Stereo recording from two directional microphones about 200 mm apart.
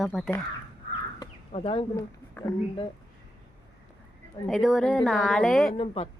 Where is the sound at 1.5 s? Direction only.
25° left (ahead or behind).